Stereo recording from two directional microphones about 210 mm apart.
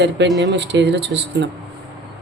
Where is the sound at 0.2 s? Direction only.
55° right (ahead or behind).